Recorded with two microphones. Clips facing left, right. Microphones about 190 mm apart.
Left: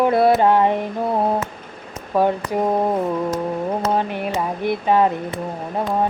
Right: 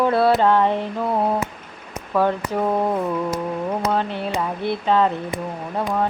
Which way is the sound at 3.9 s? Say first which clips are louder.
Left 1 dB; 15° left (ahead or behind).